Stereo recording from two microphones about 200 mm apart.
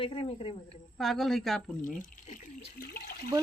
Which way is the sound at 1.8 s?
40° left (ahead or behind).